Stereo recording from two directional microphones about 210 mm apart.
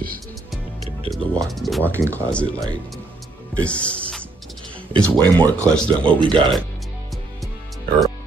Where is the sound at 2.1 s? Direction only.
5° left (ahead or behind).